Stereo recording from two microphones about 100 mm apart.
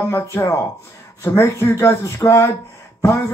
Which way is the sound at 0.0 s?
25° left (ahead or behind).